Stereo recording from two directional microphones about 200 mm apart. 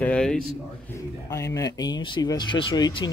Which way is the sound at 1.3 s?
15° left (ahead or behind).